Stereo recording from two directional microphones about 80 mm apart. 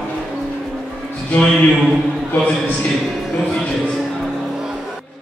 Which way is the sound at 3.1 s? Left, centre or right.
Centre.